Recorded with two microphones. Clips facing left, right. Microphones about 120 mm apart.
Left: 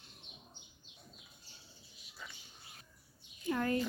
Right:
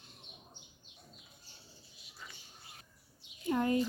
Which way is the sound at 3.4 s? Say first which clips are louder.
Right 3 dB; 20° right (ahead or behind).